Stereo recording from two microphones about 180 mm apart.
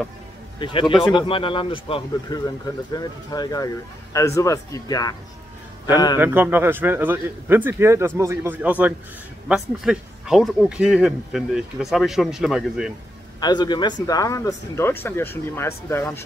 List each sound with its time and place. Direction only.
0.6 s speech: 30° left (ahead or behind)
6.1 s a man's voice: 10° right (ahead or behind)
13.4 s speech: 25° left (ahead or behind)